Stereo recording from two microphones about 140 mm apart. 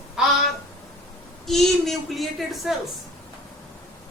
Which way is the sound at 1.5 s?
Centre (ahead or behind).